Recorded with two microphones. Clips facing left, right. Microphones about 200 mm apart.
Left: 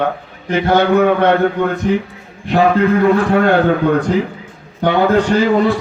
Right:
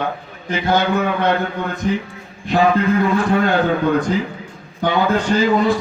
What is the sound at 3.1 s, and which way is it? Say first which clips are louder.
Speech: left 4 dB; 60° left (ahead or behind).